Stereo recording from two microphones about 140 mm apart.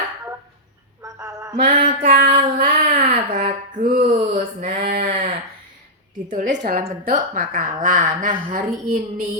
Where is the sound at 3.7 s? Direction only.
60° right (ahead or behind).